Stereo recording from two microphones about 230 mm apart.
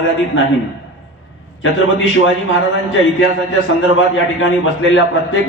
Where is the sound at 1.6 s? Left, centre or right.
Left.